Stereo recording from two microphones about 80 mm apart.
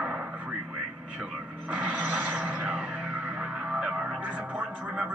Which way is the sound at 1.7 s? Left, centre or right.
Centre.